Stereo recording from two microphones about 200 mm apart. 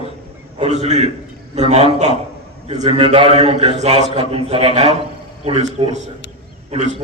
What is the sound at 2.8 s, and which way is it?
A man's voice, 30° right (ahead or behind).